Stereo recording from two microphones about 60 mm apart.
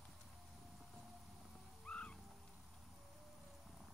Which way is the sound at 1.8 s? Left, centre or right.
Centre.